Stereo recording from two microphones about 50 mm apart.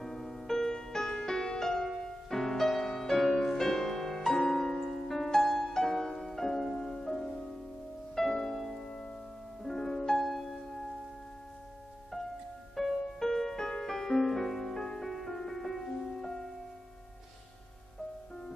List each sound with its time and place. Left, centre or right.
0.0 s music: centre
12.7 s music: centre